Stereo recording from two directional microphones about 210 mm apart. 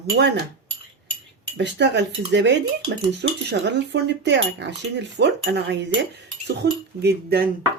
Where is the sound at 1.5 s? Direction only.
55° right (ahead or behind).